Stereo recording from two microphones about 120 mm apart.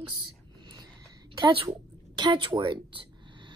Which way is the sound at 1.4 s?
40° right (ahead or behind).